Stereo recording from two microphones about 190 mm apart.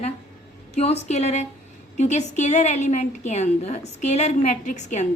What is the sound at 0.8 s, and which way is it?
A woman's voice, 35° left (ahead or behind).